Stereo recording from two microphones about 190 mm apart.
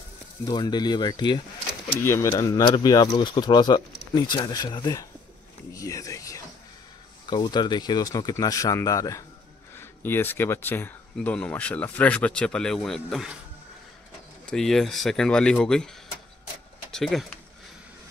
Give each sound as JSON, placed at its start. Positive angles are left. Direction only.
{"t": 0.5, "sound": "speech", "side_deg": 20}
{"t": 5.8, "sound": "a sound", "side_deg": 15}
{"t": 7.2, "sound": "speech", "side_deg": 20}
{"t": 14.4, "sound": "speech", "side_deg": 5}
{"t": 16.9, "sound": "speech", "side_deg": 0}